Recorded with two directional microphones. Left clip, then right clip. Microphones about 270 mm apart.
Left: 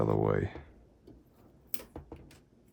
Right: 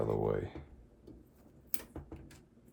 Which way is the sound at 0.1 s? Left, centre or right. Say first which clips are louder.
Left 4 dB; left.